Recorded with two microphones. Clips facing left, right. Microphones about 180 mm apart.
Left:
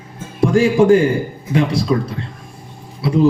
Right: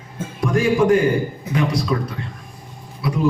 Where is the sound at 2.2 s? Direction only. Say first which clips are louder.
Left 2 dB; 25° left (ahead or behind).